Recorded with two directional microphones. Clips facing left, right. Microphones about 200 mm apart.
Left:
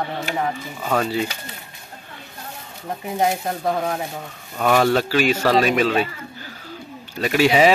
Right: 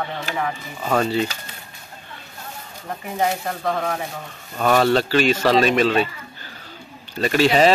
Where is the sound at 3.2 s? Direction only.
15° left (ahead or behind).